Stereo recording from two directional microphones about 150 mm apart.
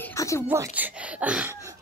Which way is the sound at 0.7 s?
10° right (ahead or behind).